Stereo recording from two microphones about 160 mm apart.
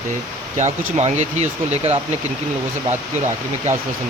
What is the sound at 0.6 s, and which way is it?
Speech, 45° right (ahead or behind).